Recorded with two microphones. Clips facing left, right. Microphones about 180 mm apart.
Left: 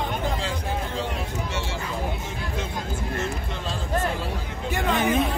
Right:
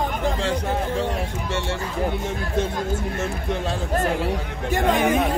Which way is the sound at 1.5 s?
60° right (ahead or behind).